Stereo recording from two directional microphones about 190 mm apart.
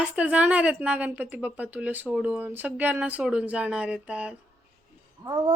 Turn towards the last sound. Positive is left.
turn(degrees=-20)  # may be behind; listen again after turning